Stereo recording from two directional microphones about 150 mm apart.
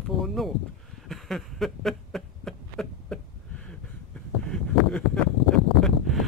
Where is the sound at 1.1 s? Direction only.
Centre (ahead or behind).